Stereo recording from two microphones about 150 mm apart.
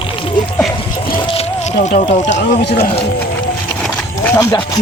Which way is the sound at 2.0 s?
50° left (ahead or behind).